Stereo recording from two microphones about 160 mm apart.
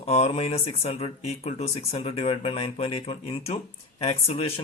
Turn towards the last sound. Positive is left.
turn(degrees=40)  # may be behind; listen again after turning